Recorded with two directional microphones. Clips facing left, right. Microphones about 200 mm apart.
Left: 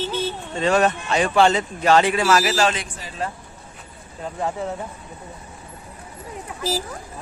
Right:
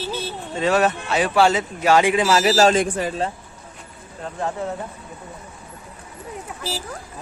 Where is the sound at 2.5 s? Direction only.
40° right (ahead or behind).